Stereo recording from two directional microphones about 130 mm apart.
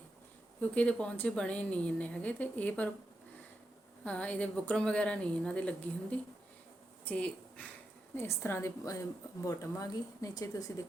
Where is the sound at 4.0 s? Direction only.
10° left (ahead or behind).